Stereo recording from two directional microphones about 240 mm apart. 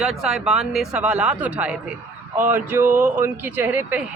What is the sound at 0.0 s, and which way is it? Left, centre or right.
Speech, centre.